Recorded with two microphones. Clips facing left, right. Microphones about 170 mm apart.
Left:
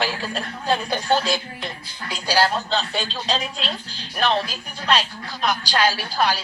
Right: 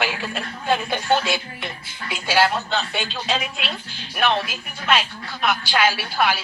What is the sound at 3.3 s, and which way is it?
Speech, 5° right (ahead or behind).